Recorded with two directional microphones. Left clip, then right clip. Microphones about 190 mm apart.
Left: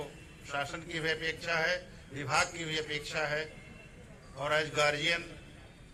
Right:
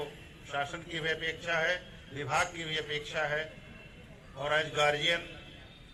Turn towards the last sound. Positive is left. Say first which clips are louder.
# right 1 dB
turn(degrees=-40)  # may be behind; listen again after turning